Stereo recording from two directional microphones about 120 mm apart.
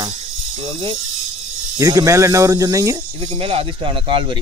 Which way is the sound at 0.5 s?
45° right (ahead or behind).